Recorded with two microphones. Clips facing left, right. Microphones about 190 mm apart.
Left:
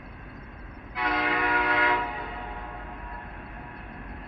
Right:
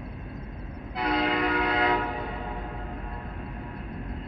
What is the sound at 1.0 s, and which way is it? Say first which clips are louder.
Train: right 2 dB; 35° right (ahead or behind).